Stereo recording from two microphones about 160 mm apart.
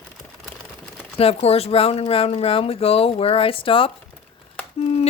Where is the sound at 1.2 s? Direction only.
40° left (ahead or behind).